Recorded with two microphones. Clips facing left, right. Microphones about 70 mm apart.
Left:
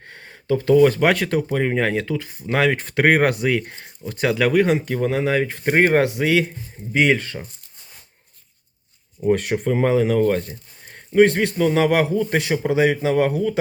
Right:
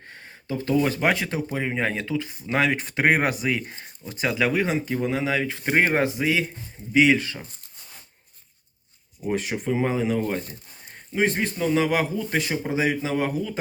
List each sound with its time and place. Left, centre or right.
0.0 s speech: left
6.9 s speech: left
9.2 s a man's voice: left